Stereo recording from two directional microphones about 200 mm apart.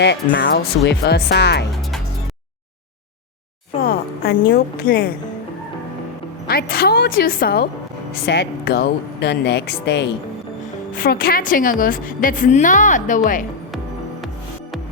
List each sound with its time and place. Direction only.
0.0 s speech: 60° left (ahead or behind)
3.8 s a woman's voice: 50° left (ahead or behind)
6.5 s a woman's voice: 50° left (ahead or behind)
10.9 s a woman's voice: 45° left (ahead or behind)